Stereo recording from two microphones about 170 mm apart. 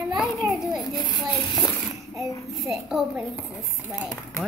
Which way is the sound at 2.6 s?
Centre (ahead or behind).